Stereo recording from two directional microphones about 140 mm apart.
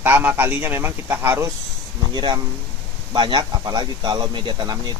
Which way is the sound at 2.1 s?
30° right (ahead or behind).